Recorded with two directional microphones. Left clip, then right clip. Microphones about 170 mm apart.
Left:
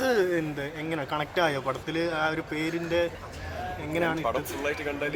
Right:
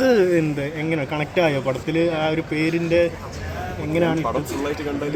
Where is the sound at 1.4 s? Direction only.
40° left (ahead or behind).